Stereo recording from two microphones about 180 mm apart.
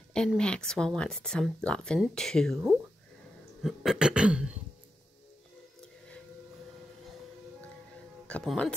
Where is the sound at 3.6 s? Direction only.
Centre (ahead or behind).